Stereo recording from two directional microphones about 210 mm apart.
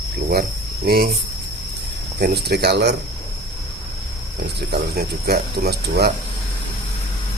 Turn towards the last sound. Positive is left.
turn(degrees=-50)  # may be behind; listen again after turning